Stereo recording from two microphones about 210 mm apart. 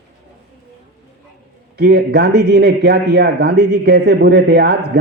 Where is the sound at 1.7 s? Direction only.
50° right (ahead or behind).